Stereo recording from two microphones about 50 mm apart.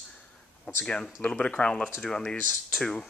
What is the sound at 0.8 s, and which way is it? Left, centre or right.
Speech, centre.